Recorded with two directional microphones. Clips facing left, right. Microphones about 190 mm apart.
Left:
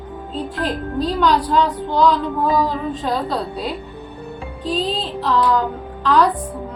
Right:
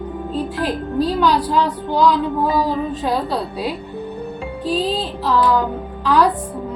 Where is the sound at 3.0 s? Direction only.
10° right (ahead or behind).